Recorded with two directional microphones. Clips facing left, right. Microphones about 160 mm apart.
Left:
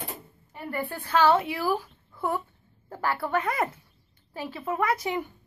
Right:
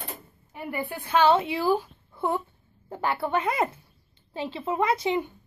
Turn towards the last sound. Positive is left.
turn(degrees=-25)  # may be behind; listen again after turning